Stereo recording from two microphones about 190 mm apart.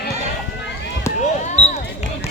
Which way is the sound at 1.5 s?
35° left (ahead or behind).